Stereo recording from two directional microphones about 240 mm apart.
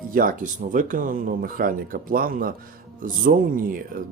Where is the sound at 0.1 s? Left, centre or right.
Right.